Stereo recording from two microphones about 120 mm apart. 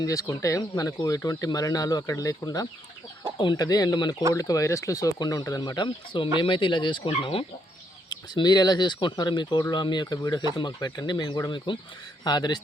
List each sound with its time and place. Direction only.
0.0 s speech: 30° left (ahead or behind); by 7.4 s 50° left (ahead or behind)
8.1 s speech: 35° left (ahead or behind)